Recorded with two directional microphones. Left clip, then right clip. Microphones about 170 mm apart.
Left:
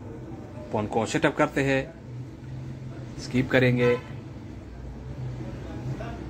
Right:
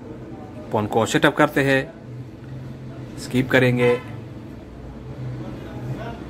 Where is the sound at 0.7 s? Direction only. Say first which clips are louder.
Right 7 dB; 20° right (ahead or behind).